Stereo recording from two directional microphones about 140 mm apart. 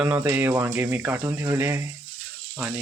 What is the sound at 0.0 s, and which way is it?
Speech, 15° right (ahead or behind).